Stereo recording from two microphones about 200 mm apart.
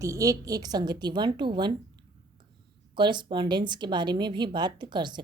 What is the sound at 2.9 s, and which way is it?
A woman's voice, 20° right (ahead or behind).